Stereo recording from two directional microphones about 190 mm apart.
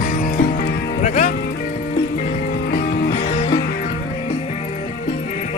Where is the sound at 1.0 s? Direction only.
40° left (ahead or behind).